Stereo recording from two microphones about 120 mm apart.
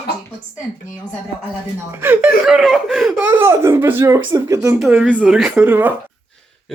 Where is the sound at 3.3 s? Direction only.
20° right (ahead or behind).